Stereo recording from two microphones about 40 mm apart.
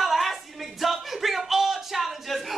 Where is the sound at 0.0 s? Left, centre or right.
Centre.